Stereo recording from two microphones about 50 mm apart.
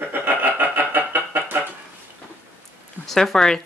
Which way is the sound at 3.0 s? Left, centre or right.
Centre.